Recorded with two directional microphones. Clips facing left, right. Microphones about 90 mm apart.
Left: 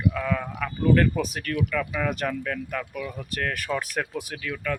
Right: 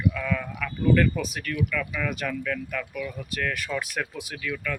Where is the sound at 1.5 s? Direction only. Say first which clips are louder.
Left 3 dB; 25° left (ahead or behind).